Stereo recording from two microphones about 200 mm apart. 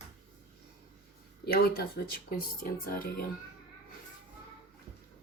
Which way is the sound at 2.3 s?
45° left (ahead or behind).